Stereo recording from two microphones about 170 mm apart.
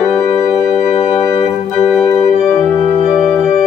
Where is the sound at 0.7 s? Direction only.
40° left (ahead or behind).